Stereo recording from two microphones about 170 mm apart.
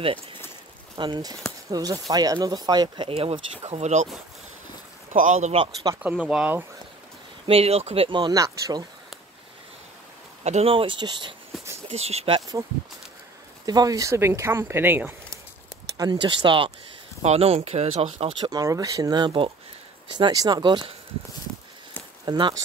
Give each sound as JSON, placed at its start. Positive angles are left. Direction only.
{"t": 0.0, "sound": "speech", "side_deg": -30}
{"t": 5.1, "sound": "speech", "side_deg": -45}
{"t": 6.0, "sound": "speech", "side_deg": -5}
{"t": 7.4, "sound": "speech", "side_deg": -35}
{"t": 10.4, "sound": "speech", "side_deg": -40}
{"t": 11.9, "sound": "speech", "side_deg": -40}
{"t": 12.4, "sound": "speech", "side_deg": -20}
{"t": 13.7, "sound": "speech", "side_deg": -20}
{"t": 16.0, "sound": "speech", "side_deg": -25}
{"t": 18.4, "sound": "speech", "side_deg": -20}
{"t": 22.2, "sound": "speech", "side_deg": -25}